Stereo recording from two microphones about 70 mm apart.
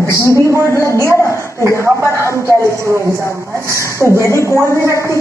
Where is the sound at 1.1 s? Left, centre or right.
Left.